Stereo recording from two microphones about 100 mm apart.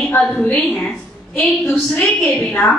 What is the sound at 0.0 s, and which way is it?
A woman's voice, 10° left (ahead or behind).